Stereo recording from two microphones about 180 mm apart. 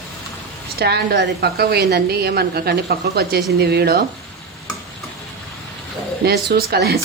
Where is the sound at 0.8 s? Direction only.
65° right (ahead or behind).